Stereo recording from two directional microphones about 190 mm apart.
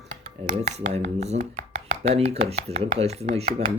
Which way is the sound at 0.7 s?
40° right (ahead or behind).